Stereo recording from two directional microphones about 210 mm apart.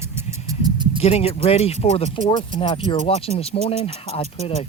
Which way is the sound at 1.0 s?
30° left (ahead or behind).